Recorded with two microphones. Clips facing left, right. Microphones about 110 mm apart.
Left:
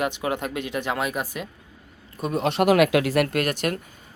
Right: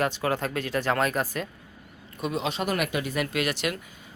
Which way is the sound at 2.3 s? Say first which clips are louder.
Left 10 dB; 60° left (ahead or behind).